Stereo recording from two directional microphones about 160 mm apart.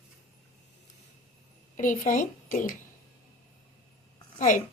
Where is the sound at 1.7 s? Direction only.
55° left (ahead or behind).